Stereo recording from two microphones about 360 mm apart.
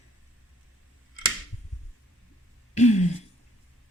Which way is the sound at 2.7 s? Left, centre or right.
Centre.